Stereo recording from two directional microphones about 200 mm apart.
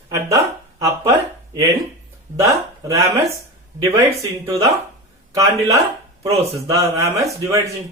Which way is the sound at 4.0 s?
15° right (ahead or behind).